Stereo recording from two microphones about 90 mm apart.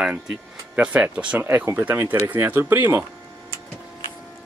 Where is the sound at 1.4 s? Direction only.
25° right (ahead or behind).